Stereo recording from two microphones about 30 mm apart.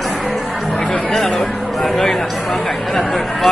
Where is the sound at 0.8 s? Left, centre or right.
Left.